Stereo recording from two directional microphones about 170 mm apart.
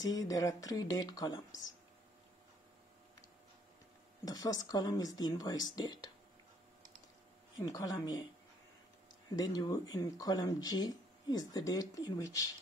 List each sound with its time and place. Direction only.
0.0 s speech: 20° left (ahead or behind)
4.2 s speech: 20° left (ahead or behind)
7.5 s speech: 20° left (ahead or behind)
9.3 s speech: 25° left (ahead or behind)